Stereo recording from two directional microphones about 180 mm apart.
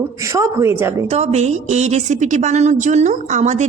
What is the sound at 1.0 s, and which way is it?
A woman's voice, 40° right (ahead or behind).